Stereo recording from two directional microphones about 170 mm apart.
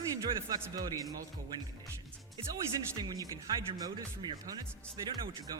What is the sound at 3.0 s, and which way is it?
Speech, 20° right (ahead or behind).